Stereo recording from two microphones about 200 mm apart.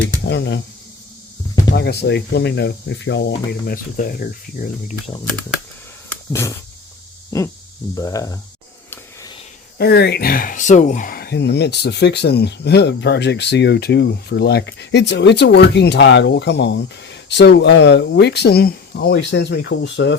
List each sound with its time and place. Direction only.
0.3 s speech: 60° left (ahead or behind)
1.7 s speech: 55° left (ahead or behind)
6.1 s a sound: 15° left (ahead or behind)
7.3 s speech: 15° left (ahead or behind)
9.7 s speech: 55° left (ahead or behind)